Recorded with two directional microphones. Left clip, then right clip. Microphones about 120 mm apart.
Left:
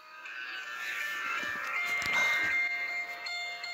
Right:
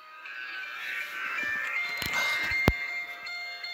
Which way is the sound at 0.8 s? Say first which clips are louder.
Even; 50° left (ahead or behind).